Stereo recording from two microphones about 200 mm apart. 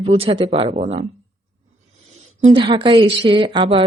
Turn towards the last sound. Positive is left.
turn(degrees=-25)  # may be behind; listen again after turning